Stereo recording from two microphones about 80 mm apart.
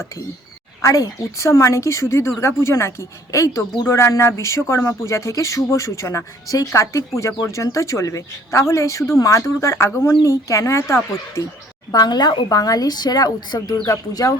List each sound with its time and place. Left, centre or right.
0.8 s speech: left
11.9 s a woman's voice: left